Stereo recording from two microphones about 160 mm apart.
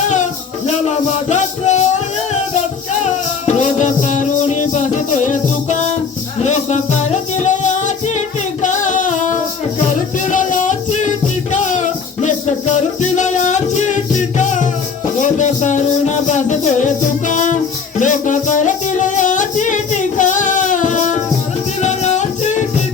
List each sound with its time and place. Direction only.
0.7 s music: 45° left (ahead or behind)
3.4 s music: 50° left (ahead or behind)
8.6 s female singing: 50° left (ahead or behind)
9.8 s music: 50° left (ahead or behind)